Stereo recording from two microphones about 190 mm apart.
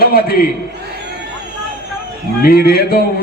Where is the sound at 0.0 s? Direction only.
55° left (ahead or behind).